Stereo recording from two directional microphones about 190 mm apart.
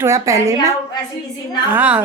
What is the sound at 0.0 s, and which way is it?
Speech, 15° right (ahead or behind).